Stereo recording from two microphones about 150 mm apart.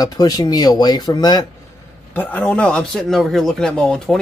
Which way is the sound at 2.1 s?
10° left (ahead or behind).